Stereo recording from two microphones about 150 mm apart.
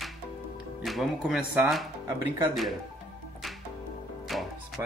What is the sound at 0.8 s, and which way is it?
Speech, centre (ahead or behind).